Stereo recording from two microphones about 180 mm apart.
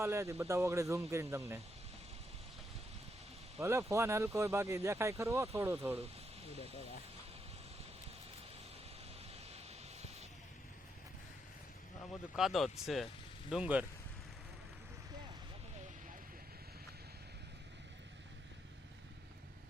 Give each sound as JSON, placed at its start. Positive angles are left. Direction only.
{"t": 0.0, "sound": "speech", "side_deg": -15}
{"t": 3.6, "sound": "speech", "side_deg": -15}
{"t": 12.4, "sound": "speech", "side_deg": 0}